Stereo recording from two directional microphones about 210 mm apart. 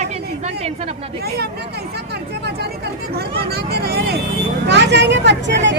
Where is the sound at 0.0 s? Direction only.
30° right (ahead or behind).